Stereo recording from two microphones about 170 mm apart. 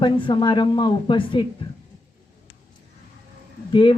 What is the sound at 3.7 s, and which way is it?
Speech, 30° left (ahead or behind).